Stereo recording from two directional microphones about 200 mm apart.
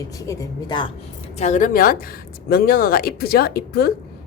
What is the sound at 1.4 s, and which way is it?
A woman's voice, 35° left (ahead or behind).